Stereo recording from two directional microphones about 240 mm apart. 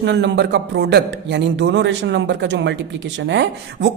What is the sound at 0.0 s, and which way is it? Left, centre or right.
Speech, right.